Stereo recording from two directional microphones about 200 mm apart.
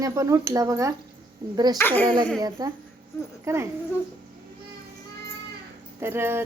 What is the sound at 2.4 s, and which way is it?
Speech, 20° right (ahead or behind).